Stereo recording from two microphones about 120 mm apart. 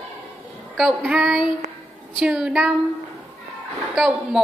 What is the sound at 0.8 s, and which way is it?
Child singing, 5° right (ahead or behind).